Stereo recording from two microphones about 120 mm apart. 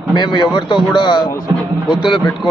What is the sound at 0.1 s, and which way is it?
A man's voice, 40° left (ahead or behind).